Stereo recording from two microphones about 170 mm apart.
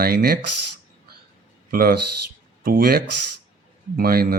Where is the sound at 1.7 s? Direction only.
60° right (ahead or behind).